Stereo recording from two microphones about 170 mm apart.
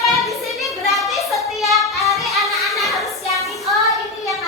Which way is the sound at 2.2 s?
Centre (ahead or behind).